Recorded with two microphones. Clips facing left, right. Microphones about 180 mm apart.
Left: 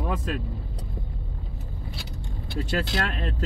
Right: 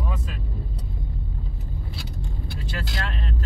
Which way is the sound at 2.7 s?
60° left (ahead or behind).